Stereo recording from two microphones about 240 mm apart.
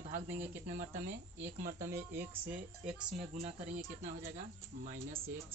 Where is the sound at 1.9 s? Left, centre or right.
Centre.